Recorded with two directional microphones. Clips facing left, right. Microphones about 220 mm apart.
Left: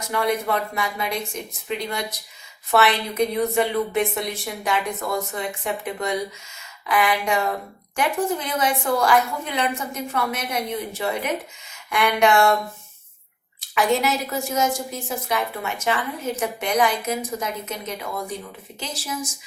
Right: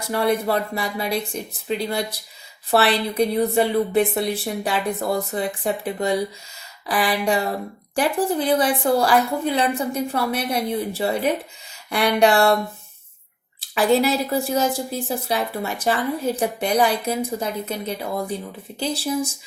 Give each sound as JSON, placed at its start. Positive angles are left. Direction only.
{"t": 0.1, "sound": "a woman's voice", "side_deg": -35}
{"t": 13.6, "sound": "a woman's voice", "side_deg": -30}